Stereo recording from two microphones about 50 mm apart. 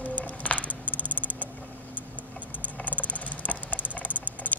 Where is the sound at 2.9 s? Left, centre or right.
Right.